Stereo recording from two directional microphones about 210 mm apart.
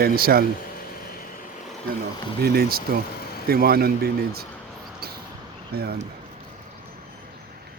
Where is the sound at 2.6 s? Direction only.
45° right (ahead or behind).